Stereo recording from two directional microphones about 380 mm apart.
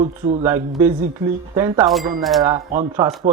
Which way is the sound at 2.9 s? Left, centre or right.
Centre.